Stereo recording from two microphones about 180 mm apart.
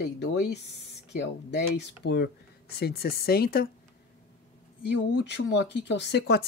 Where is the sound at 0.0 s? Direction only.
70° left (ahead or behind).